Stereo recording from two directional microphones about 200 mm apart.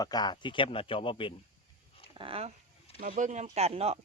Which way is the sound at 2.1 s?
25° right (ahead or behind).